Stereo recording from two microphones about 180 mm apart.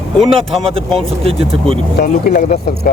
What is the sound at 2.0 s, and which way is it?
Speech, 50° left (ahead or behind).